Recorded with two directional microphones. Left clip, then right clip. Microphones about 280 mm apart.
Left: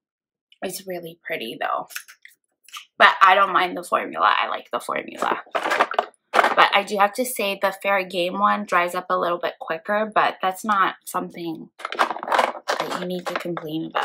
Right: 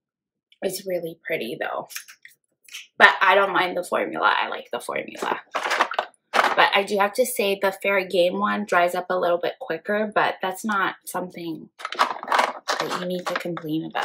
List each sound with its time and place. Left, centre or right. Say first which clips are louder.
0.6 s speech: right 4 dB; centre
3.0 s speech: left 2 dB; centre
5.5 s typewriter: even; left
6.5 s speech: left 1 dB; centre
11.9 s typewriter: left 1 dB; left
13.7 s speech: right 1 dB; centre